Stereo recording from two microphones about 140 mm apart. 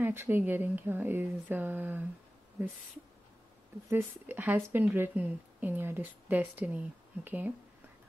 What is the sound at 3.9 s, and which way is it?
Speech, 15° right (ahead or behind).